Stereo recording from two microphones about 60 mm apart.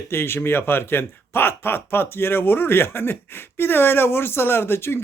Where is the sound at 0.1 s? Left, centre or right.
Left.